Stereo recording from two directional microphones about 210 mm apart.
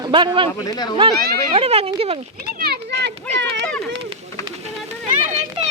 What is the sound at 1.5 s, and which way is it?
Speech, 30° right (ahead or behind).